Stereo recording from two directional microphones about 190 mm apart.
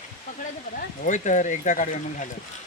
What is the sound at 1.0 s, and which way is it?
Speech, 40° left (ahead or behind).